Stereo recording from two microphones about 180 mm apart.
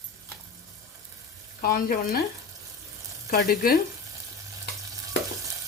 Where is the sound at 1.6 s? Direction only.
55° left (ahead or behind).